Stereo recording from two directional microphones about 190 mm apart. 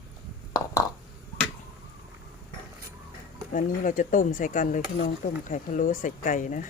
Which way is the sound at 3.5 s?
45° left (ahead or behind).